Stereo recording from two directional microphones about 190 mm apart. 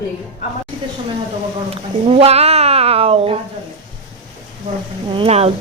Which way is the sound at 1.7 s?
30° right (ahead or behind).